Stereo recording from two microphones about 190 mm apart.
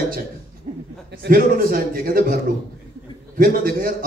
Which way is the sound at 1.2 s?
50° right (ahead or behind).